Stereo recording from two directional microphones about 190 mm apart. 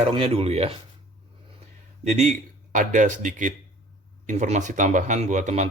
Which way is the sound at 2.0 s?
35° right (ahead or behind).